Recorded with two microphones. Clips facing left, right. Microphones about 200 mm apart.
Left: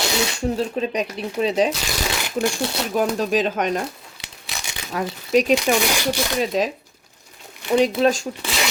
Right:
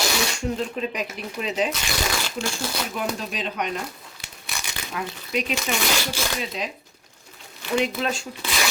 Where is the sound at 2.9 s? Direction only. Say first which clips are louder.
Left 9 dB; 45° left (ahead or behind).